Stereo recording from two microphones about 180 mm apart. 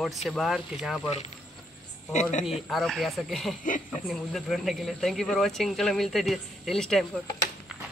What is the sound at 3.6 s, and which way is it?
Speech, 45° left (ahead or behind).